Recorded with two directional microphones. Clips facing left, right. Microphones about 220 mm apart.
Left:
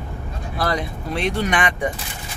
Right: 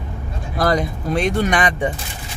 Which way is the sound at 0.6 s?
45° right (ahead or behind).